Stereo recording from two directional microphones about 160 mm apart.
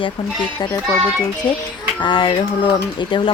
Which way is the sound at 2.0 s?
30° left (ahead or behind).